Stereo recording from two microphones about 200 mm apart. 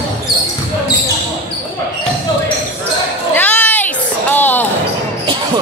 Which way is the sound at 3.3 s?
5° left (ahead or behind).